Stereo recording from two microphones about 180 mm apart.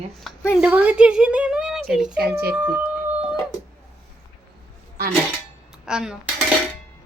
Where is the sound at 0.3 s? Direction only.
Centre (ahead or behind).